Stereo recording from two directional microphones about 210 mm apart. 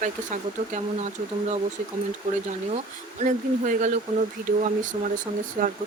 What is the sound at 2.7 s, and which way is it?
Speech, 35° right (ahead or behind).